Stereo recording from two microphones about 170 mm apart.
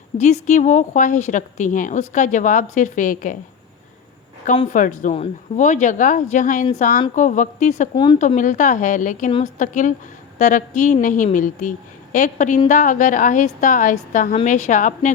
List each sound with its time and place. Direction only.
0.2 s a woman's voice: 40° left (ahead or behind)
4.7 s a woman's voice: 50° left (ahead or behind)